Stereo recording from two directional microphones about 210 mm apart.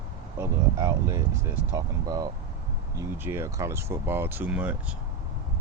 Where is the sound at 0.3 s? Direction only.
15° right (ahead or behind).